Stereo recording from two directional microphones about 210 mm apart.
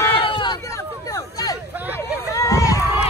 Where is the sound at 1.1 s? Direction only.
15° left (ahead or behind).